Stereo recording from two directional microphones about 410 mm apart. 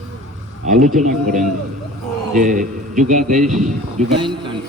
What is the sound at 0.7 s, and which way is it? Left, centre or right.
Speech, centre.